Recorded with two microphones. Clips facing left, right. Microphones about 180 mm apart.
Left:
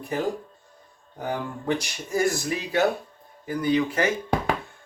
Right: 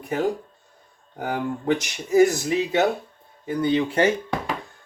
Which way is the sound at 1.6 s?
20° right (ahead or behind).